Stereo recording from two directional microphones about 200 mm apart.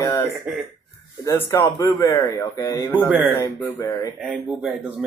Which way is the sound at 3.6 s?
15° left (ahead or behind).